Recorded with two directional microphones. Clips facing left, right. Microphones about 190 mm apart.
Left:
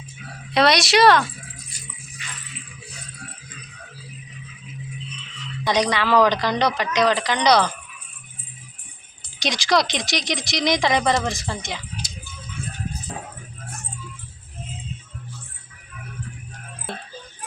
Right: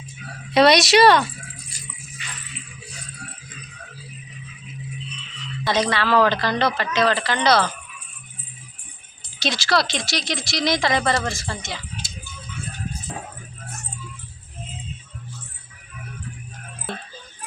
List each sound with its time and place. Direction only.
0.5 s speech: centre (ahead or behind)
5.6 s speech: 15° left (ahead or behind)
9.4 s speech: 15° left (ahead or behind)